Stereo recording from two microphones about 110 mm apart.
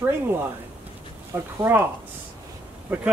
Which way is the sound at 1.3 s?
20° right (ahead or behind).